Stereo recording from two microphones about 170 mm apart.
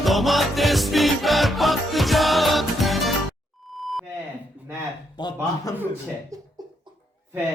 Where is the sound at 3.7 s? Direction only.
Centre (ahead or behind).